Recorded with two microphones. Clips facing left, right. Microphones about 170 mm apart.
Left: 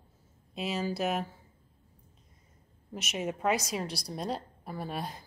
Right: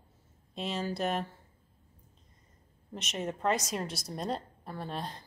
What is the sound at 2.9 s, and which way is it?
A woman's voice, 5° left (ahead or behind).